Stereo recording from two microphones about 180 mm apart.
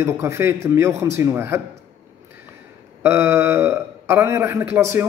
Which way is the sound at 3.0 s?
15° right (ahead or behind).